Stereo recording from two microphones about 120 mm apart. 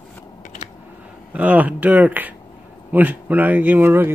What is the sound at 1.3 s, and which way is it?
Speech, 15° right (ahead or behind).